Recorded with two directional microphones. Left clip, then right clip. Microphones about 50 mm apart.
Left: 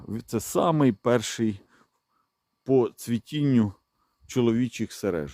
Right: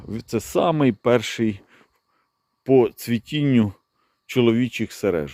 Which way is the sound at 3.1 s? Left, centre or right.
Centre.